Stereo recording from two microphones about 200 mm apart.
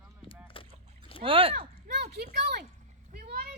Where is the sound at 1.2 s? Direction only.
25° right (ahead or behind).